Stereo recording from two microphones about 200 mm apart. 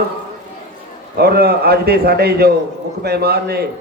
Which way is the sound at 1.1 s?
50° right (ahead or behind).